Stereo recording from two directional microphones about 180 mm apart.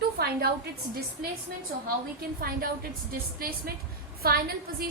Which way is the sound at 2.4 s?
55° right (ahead or behind).